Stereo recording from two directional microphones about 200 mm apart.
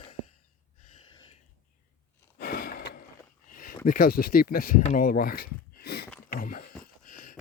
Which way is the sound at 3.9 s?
45° left (ahead or behind).